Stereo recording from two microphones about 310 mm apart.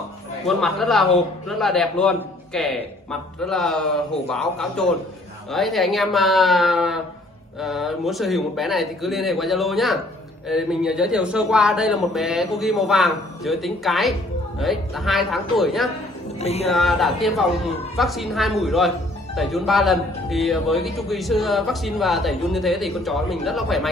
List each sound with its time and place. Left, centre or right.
0.5 s speech: centre
16.3 s speech: centre
16.7 s speech: centre